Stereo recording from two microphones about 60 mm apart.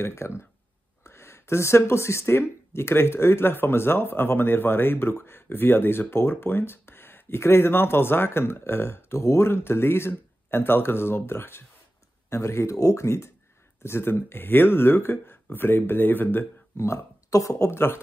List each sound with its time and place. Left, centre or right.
0.0 s speech: left
12.3 s speech: left
16.7 s speech: left
17.6 s speech: left